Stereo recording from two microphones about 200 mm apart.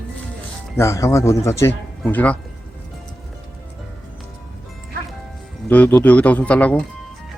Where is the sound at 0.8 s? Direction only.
15° left (ahead or behind).